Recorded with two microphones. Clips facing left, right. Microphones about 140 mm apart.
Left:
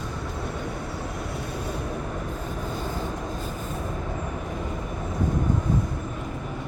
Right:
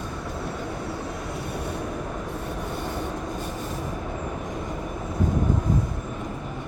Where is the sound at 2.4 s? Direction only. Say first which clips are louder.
Even; 70° right (ahead or behind).